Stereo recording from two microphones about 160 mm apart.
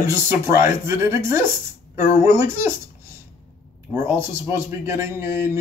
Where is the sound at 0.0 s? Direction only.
20° right (ahead or behind).